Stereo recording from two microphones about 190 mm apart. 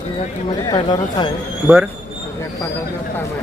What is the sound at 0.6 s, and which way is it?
Speech, 20° left (ahead or behind).